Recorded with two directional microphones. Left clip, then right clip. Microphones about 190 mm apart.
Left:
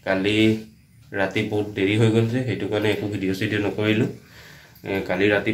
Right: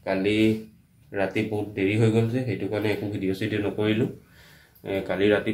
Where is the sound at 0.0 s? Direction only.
Centre (ahead or behind).